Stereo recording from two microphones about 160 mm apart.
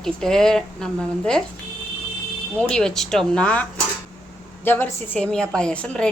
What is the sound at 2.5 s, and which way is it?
A woman's voice, 5° left (ahead or behind).